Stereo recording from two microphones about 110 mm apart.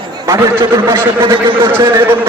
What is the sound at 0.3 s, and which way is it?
Speech, 25° right (ahead or behind).